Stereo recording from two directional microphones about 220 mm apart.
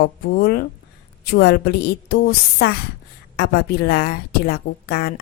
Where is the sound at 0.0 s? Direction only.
45° left (ahead or behind).